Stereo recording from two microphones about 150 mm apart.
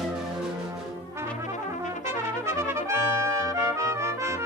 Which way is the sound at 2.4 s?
15° right (ahead or behind).